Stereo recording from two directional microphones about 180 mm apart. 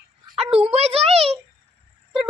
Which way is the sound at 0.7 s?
35° right (ahead or behind).